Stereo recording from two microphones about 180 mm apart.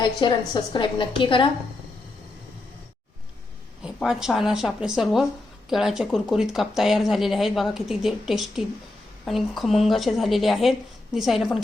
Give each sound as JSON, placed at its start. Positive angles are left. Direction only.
{"t": 0.0, "sound": "a woman's voice", "side_deg": 25}
{"t": 3.8, "sound": "speech", "side_deg": -5}